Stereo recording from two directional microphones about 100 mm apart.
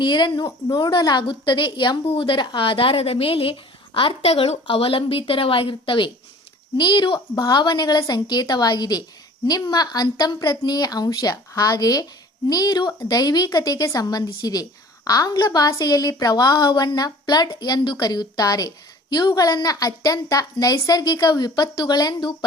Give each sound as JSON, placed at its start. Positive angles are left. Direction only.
{"t": 0.0, "sound": "a woman's voice", "side_deg": 50}
{"t": 4.6, "sound": "speech", "side_deg": 70}
{"t": 6.7, "sound": "a woman's voice", "side_deg": 50}